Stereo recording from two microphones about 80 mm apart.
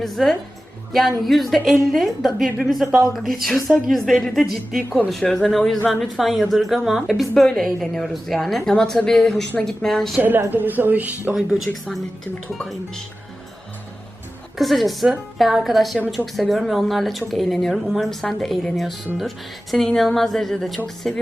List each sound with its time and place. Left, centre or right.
0.0 s a woman's voice: centre
10.2 s speech: right
11.5 s a woman's voice: centre
14.6 s a woman's voice: centre